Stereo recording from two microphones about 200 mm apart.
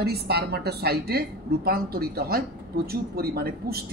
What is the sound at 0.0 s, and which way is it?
Speech, 55° right (ahead or behind).